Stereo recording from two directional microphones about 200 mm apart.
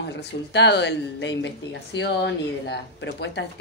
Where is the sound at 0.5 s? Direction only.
60° left (ahead or behind).